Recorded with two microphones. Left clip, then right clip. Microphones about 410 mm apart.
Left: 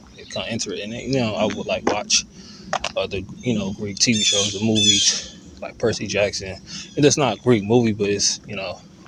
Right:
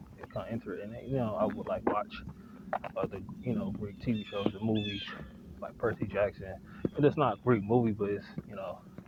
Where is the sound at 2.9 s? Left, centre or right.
Right.